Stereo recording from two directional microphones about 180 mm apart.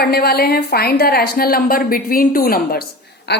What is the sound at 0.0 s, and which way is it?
A woman's voice, 60° left (ahead or behind).